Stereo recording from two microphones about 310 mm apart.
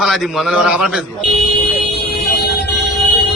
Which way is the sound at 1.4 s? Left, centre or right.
Left.